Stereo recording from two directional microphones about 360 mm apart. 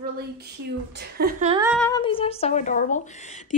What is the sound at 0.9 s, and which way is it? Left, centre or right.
Speech, right.